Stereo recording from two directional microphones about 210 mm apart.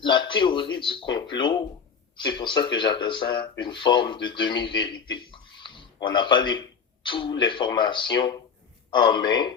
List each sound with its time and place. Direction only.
0.0 s speech: 20° left (ahead or behind)